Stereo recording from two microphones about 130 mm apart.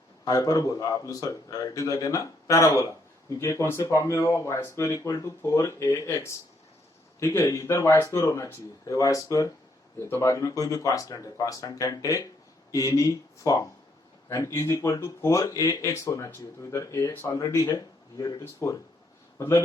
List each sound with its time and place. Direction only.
0.3 s speech: 30° left (ahead or behind)